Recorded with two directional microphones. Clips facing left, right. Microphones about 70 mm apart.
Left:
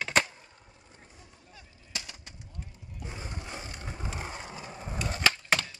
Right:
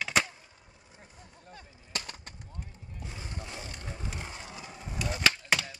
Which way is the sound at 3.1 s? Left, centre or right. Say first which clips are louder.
Left 2 dB; left.